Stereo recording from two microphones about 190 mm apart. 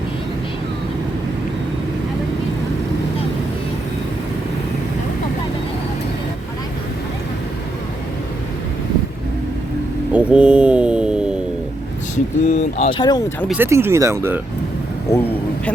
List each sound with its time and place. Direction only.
10.1 s a sound: 5° right (ahead or behind)
12.1 s speech: 35° left (ahead or behind)
13.0 s speech: 20° left (ahead or behind)
13.5 s speech: 10° right (ahead or behind)